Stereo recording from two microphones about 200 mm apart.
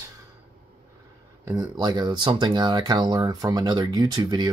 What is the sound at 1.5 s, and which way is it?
Speech, 20° right (ahead or behind).